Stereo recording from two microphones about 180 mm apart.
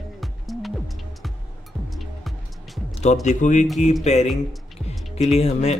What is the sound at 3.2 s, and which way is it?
Speech, 40° left (ahead or behind).